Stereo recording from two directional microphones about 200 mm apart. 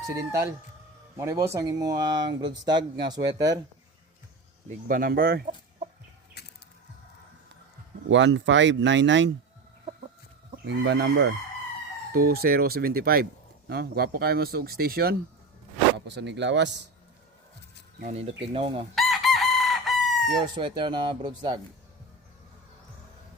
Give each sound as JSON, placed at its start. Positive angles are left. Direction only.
{"t": 0.2, "sound": "speech", "side_deg": -15}
{"t": 4.9, "sound": "speech", "side_deg": -45}
{"t": 6.4, "sound": "mechanisms", "side_deg": 55}
{"t": 8.0, "sound": "speech", "side_deg": -65}
{"t": 10.5, "sound": "speech", "side_deg": -60}
{"t": 12.1, "sound": "speech", "side_deg": -50}
{"t": 18.0, "sound": "speech", "side_deg": -30}
{"t": 18.9, "sound": "chicken", "side_deg": 0}
{"t": 20.4, "sound": "speech", "side_deg": -25}